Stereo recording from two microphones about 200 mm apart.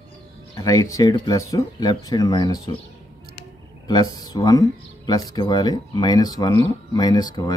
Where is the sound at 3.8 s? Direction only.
20° left (ahead or behind).